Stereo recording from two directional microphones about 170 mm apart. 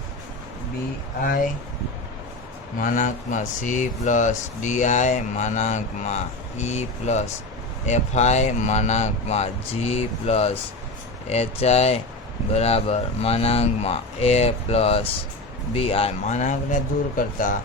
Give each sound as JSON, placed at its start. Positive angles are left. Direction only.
{"t": 1.2, "sound": "speech", "side_deg": 55}
{"t": 2.7, "sound": "speech", "side_deg": 50}